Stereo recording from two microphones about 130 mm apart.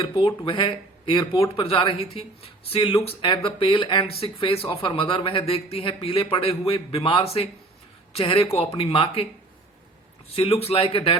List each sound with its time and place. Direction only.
0.0 s speech: 45° left (ahead or behind)
10.3 s speech: 50° left (ahead or behind)